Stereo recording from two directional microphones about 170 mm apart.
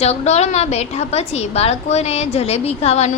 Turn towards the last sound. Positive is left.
turn(degrees=40)  # may be behind; listen again after turning